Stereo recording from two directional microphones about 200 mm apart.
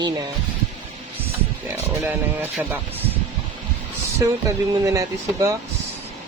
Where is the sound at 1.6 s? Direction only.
10° right (ahead or behind).